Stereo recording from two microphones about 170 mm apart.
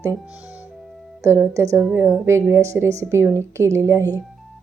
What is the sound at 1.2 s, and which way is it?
A woman's voice, 15° right (ahead or behind).